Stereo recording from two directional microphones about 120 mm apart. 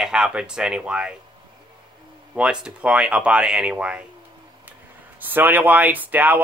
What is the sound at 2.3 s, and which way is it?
Speech, 10° right (ahead or behind).